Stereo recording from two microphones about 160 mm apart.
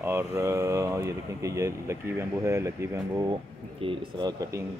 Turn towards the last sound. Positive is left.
turn(degrees=-25)  # may be behind; listen again after turning